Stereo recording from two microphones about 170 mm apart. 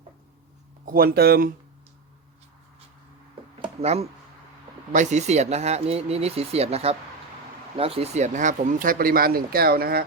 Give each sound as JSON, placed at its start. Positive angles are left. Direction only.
{"t": 0.9, "sound": "speech", "side_deg": -60}
{"t": 3.6, "sound": "speech", "side_deg": -35}